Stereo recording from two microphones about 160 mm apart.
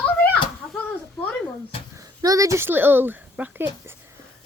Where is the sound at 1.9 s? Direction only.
20° right (ahead or behind).